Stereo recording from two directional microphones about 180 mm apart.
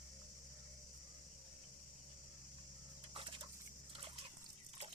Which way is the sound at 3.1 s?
30° right (ahead or behind).